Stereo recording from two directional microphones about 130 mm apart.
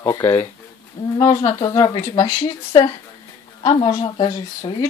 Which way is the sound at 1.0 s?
30° left (ahead or behind).